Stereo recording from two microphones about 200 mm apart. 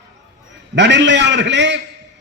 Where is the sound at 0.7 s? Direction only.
60° right (ahead or behind).